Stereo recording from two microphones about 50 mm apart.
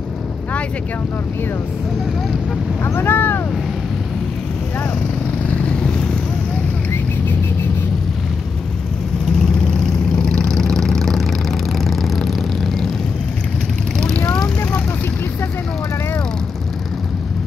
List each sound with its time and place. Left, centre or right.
2.8 s speech: left
5.7 s vehicle: centre
10.2 s vehicle: centre
13.9 s vehicle: centre